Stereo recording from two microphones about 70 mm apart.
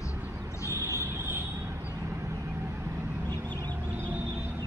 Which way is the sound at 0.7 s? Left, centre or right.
Right.